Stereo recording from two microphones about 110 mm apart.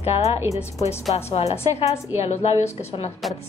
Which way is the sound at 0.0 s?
70° left (ahead or behind).